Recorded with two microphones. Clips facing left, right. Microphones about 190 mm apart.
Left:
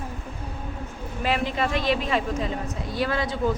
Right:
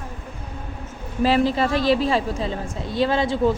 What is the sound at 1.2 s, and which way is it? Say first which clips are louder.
A woman's voice: right 7 dB; 35° right (ahead or behind).